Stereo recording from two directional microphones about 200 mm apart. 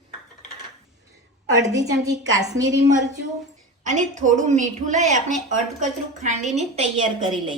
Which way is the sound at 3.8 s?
35° right (ahead or behind).